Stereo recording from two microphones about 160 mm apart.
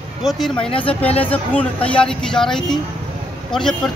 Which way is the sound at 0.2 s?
Centre (ahead or behind).